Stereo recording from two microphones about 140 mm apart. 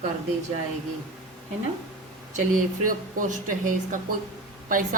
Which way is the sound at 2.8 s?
70° right (ahead or behind).